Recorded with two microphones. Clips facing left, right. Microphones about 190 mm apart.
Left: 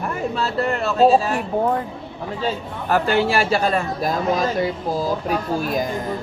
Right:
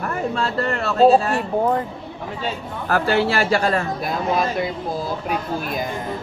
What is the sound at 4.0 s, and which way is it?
Speech, 40° left (ahead or behind).